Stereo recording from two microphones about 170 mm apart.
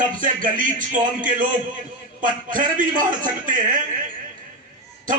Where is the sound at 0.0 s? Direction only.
50° right (ahead or behind).